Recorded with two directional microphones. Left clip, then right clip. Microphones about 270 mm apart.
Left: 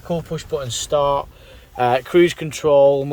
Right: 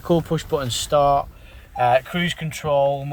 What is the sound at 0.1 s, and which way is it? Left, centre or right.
Speech, centre.